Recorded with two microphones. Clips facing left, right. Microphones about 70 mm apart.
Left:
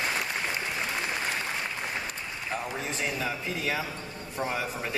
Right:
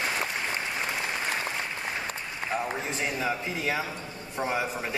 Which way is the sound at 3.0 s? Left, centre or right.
Centre.